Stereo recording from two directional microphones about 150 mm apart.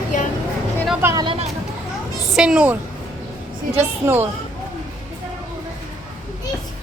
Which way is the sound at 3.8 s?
15° right (ahead or behind).